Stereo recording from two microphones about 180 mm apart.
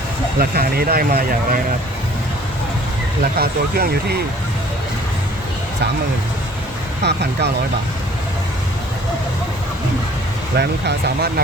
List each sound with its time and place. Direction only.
0.3 s speech: 55° right (ahead or behind)
3.3 s speech: 55° right (ahead or behind)
7.0 s speech: 70° right (ahead or behind)
10.6 s speech: 65° right (ahead or behind)